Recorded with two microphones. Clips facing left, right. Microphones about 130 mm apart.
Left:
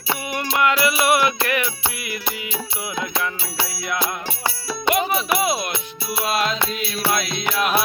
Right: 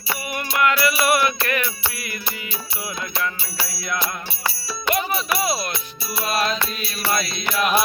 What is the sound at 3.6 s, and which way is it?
Music, 20° left (ahead or behind).